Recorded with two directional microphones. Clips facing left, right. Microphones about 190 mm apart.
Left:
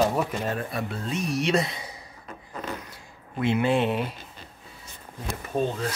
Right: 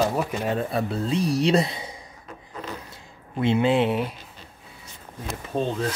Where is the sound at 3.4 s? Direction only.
25° right (ahead or behind).